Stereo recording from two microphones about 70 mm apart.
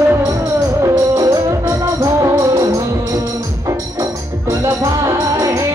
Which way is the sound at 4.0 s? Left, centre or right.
Right.